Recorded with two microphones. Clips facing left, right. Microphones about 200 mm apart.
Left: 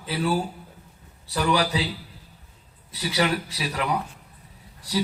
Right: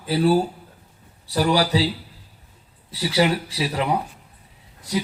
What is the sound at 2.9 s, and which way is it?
Speech, 30° right (ahead or behind).